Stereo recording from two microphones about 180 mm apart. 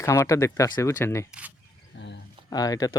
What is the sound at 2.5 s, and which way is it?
Speech, 20° left (ahead or behind).